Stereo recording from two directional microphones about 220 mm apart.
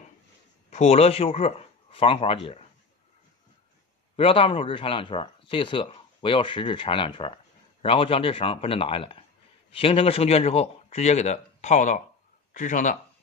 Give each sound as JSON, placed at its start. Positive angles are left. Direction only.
{"t": 0.7, "sound": "a man's voice", "side_deg": 30}
{"t": 4.2, "sound": "a man's voice", "side_deg": 25}